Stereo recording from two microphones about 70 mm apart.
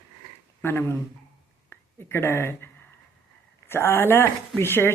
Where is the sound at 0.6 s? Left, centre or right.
Left.